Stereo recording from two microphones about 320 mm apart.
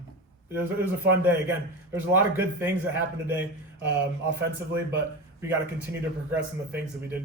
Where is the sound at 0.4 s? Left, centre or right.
Centre.